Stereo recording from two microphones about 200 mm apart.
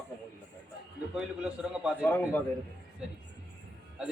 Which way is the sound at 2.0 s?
10° left (ahead or behind).